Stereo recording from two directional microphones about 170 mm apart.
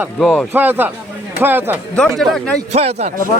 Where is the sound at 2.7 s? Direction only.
40° right (ahead or behind).